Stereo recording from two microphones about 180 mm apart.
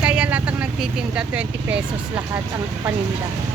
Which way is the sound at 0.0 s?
5° right (ahead or behind).